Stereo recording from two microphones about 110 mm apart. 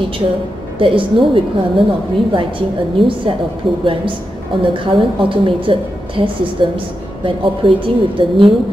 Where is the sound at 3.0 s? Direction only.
50° right (ahead or behind).